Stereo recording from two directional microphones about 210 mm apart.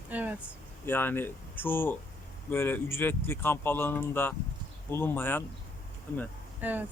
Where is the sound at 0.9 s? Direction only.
10° left (ahead or behind).